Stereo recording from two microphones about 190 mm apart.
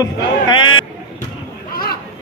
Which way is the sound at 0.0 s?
25° left (ahead or behind).